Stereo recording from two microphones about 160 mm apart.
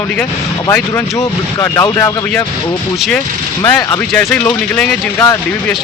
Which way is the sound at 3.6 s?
10° left (ahead or behind).